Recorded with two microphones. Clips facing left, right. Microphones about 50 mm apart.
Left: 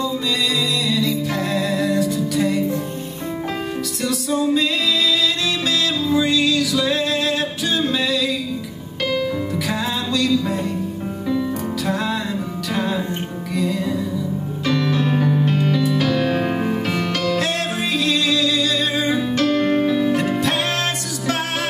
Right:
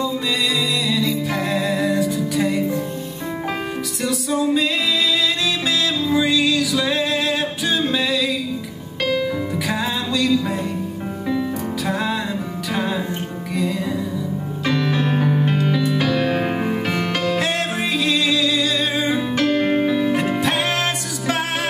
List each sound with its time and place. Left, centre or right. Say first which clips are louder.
0.0 s music: even; centre
4.0 s music: even; centre
9.7 s music: right 1 dB; centre
11.8 s music: right 1 dB; centre
14.6 s music: even; centre